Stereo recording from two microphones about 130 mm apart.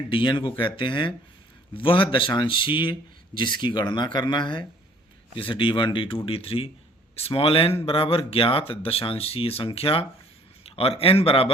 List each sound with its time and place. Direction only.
0.1 s speech: 40° left (ahead or behind)